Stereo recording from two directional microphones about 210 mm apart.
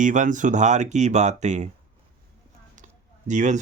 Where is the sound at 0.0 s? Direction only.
35° right (ahead or behind).